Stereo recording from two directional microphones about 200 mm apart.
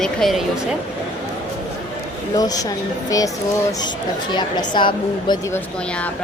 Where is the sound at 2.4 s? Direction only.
20° left (ahead or behind).